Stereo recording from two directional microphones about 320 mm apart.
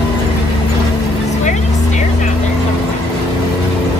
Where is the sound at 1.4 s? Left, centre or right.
Left.